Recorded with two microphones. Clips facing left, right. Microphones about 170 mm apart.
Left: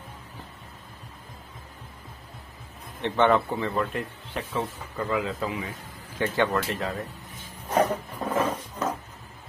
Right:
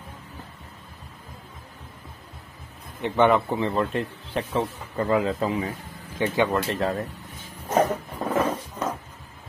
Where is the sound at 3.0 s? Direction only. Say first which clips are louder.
Right 2 dB; 10° right (ahead or behind).